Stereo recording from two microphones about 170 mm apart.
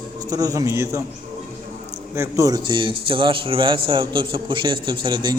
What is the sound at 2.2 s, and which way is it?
A man's voice, 20° right (ahead or behind).